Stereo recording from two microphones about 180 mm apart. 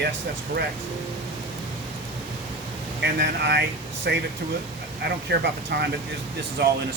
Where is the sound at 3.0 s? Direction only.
70° right (ahead or behind).